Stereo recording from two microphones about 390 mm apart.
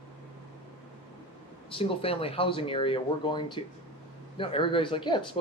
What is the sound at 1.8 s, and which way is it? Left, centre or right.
Speech, centre.